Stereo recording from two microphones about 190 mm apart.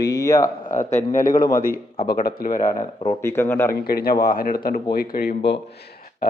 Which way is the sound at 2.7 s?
20° left (ahead or behind).